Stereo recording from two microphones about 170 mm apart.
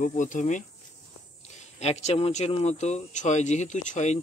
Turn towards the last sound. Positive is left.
turn(degrees=45)  # may be behind; listen again after turning